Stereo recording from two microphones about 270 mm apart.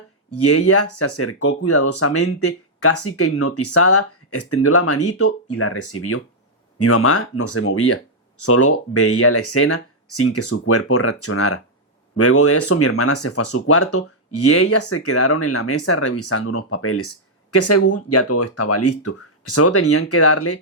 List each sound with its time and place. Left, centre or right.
0.3 s speech: left